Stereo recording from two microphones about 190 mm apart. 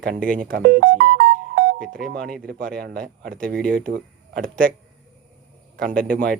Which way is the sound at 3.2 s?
45° right (ahead or behind).